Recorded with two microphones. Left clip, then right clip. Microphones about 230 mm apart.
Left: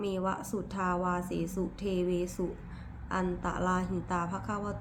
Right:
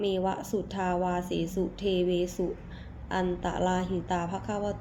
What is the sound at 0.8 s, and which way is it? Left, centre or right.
A woman's voice, centre.